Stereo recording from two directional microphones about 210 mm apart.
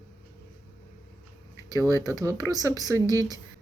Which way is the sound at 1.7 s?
15° right (ahead or behind).